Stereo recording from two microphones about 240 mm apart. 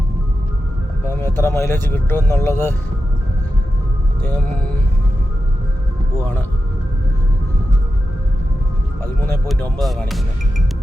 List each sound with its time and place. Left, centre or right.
1.1 s speech: centre
4.2 s speech: centre
9.2 s speech: centre